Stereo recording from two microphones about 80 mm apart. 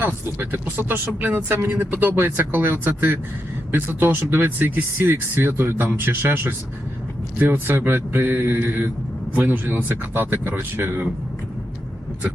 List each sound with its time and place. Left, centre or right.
0.0 s speech: right